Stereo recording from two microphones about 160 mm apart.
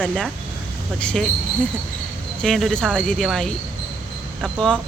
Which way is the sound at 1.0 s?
5° left (ahead or behind).